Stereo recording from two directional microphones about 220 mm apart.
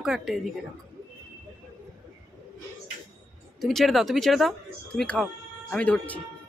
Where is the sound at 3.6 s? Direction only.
Centre (ahead or behind).